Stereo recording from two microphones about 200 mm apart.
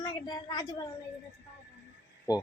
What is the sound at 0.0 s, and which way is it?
Speech, 20° left (ahead or behind).